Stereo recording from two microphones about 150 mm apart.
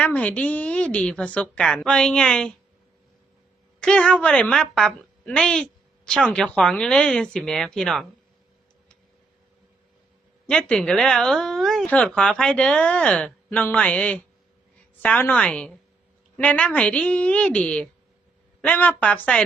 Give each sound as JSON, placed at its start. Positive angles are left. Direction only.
{"t": 0.0, "sound": "speech", "side_deg": 10}
{"t": 3.8, "sound": "speech", "side_deg": 5}
{"t": 10.4, "sound": "speech", "side_deg": 5}